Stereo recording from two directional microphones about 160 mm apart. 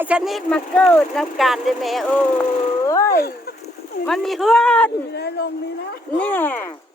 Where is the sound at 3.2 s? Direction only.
75° left (ahead or behind).